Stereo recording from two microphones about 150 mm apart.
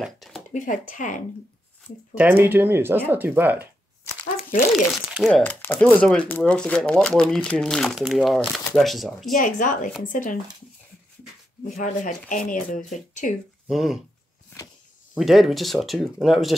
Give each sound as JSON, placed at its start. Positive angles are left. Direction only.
{"t": 0.0, "sound": "a sound", "side_deg": 0}
{"t": 0.5, "sound": "speech", "side_deg": 60}
{"t": 2.1, "sound": "speech", "side_deg": -15}
{"t": 4.7, "sound": "speech", "side_deg": 0}
{"t": 5.3, "sound": "speech", "side_deg": 10}
{"t": 9.3, "sound": "speech", "side_deg": 60}
{"t": 11.7, "sound": "speech", "side_deg": 55}
{"t": 13.7, "sound": "speech", "side_deg": 0}
{"t": 15.1, "sound": "speech", "side_deg": 0}